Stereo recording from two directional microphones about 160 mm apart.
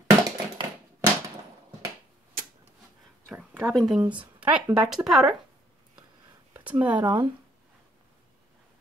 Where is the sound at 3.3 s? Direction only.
10° right (ahead or behind).